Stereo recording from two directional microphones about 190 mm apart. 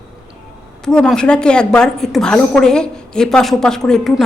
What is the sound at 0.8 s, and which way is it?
A woman's voice, 5° left (ahead or behind).